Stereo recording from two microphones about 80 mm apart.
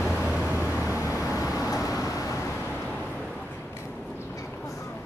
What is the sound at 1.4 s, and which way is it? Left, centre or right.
Vehicle, left.